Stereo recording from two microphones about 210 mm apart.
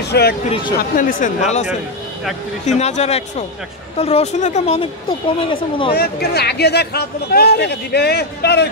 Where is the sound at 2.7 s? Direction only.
30° left (ahead or behind).